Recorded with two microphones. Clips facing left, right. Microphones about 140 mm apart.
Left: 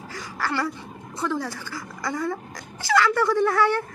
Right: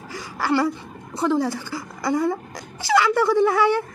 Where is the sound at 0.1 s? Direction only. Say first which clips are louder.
Right 6 dB; 15° right (ahead or behind).